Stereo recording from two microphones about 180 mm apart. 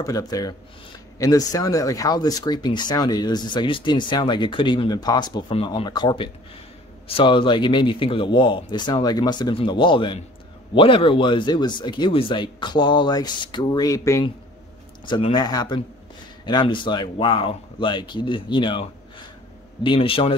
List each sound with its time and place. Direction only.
0.0 s speech: 20° left (ahead or behind)